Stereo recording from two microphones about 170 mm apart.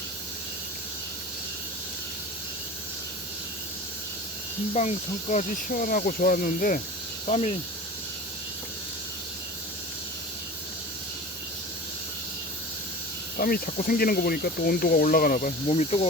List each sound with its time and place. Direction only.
4.7 s speech: 40° left (ahead or behind)
7.3 s speech: 40° left (ahead or behind)
13.4 s speech: 60° left (ahead or behind); by 16.0 s 40° left (ahead or behind)